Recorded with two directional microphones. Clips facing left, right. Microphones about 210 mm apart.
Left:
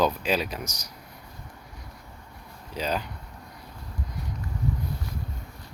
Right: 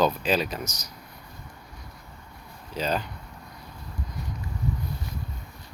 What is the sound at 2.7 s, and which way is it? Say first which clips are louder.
Speech: right 1 dB; 10° left (ahead or behind).